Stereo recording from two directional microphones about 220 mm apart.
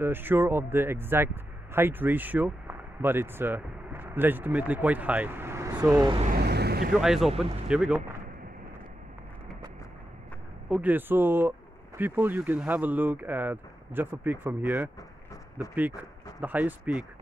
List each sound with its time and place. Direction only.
0.0 s speech: 10° right (ahead or behind)
6.3 s vehicle: 50° right (ahead or behind)
7.0 s speech: centre (ahead or behind)
10.7 s speech: 10° right (ahead or behind)
16.0 s speech: 5° right (ahead or behind)